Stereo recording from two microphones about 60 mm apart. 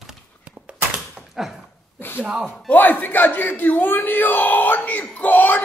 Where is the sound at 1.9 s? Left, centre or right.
Left.